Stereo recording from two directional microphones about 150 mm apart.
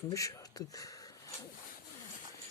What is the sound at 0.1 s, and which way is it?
Speech, 20° left (ahead or behind).